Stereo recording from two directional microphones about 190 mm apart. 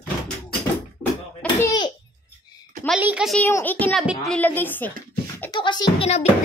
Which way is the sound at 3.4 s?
10° left (ahead or behind).